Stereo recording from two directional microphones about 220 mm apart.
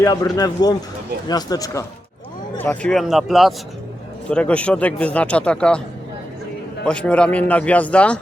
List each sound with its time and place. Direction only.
0.0 s a man's voice: 15° left (ahead or behind)
6.8 s a man's voice: 5° left (ahead or behind)